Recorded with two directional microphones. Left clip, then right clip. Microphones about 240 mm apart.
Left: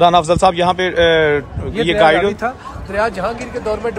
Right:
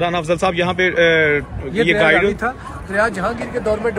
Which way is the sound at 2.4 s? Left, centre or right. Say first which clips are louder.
Left 1 dB; left.